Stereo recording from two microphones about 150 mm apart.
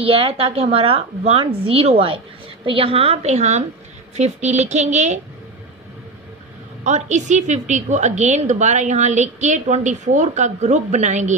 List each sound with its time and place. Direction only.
0.0 s a woman's voice: 40° right (ahead or behind)
6.8 s a woman's voice: 50° right (ahead or behind)